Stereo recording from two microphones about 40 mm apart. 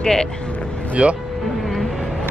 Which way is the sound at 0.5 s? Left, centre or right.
Left.